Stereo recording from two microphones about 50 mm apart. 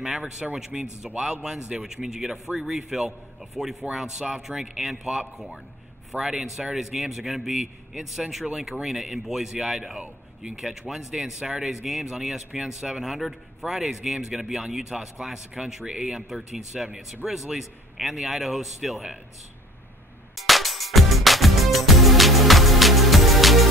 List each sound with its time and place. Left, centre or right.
0.0 s a man's voice: centre
20.3 s music: centre